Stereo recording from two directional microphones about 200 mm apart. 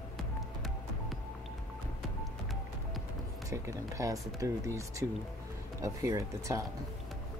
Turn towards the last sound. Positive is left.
turn(degrees=-15)  # may be behind; listen again after turning